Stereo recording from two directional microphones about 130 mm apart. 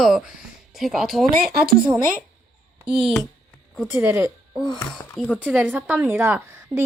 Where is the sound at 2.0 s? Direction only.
90° right.